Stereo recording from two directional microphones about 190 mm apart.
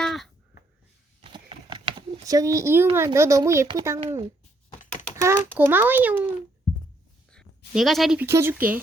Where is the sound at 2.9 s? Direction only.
15° right (ahead or behind).